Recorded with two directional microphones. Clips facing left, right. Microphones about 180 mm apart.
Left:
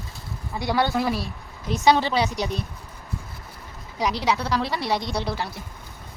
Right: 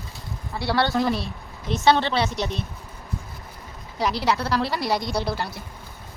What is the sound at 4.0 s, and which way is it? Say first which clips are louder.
A woman's voice: right 1 dB; 5° right (ahead or behind).